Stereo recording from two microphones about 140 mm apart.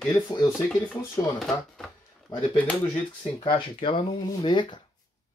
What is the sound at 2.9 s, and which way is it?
Speech, 45° left (ahead or behind).